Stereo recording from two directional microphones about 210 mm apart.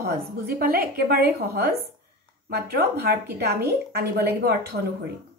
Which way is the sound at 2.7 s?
50° right (ahead or behind).